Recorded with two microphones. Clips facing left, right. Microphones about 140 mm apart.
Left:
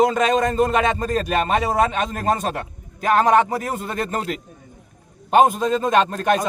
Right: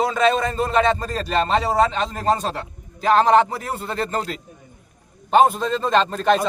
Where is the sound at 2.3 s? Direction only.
55° left (ahead or behind).